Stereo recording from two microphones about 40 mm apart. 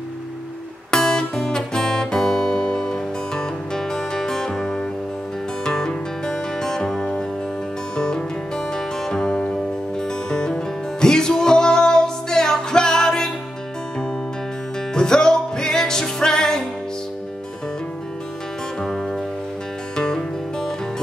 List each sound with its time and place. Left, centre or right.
0.9 s music: centre
15.0 s music: centre
18.8 s music: centre
20.0 s music: centre